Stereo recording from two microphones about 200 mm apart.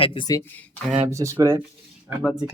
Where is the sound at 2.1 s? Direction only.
5° right (ahead or behind).